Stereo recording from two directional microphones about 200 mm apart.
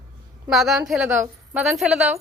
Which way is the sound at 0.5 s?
Centre (ahead or behind).